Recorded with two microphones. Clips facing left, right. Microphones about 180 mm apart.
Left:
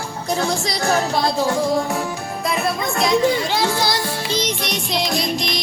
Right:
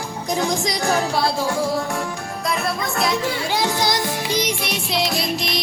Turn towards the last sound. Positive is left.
turn(degrees=0)  # may be behind; listen again after turning